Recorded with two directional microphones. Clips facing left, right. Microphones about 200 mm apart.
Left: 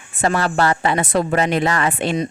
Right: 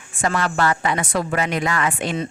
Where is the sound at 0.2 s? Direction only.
35° left (ahead or behind).